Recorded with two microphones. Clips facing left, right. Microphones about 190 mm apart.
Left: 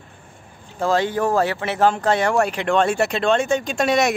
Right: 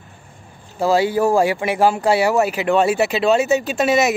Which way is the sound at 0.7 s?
10° right (ahead or behind).